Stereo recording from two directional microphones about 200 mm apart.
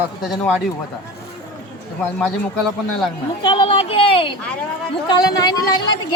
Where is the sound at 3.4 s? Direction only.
25° left (ahead or behind).